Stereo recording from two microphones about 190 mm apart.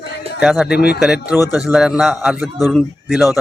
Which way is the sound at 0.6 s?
55° left (ahead or behind).